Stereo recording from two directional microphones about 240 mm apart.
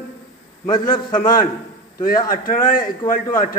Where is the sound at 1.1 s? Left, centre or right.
Left.